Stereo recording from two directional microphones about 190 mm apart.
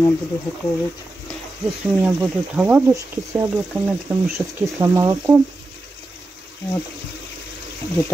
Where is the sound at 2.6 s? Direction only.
10° right (ahead or behind).